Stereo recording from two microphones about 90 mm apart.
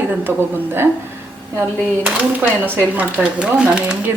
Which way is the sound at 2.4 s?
25° right (ahead or behind).